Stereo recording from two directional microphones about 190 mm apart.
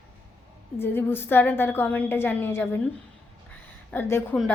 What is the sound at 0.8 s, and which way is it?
Speech, 10° left (ahead or behind).